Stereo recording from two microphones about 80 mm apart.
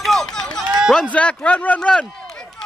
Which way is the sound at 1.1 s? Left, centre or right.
Centre.